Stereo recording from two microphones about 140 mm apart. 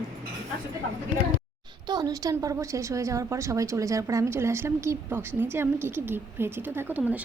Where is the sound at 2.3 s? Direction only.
25° right (ahead or behind).